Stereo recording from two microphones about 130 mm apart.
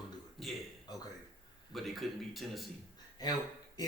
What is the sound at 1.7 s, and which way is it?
A man's voice, centre (ahead or behind).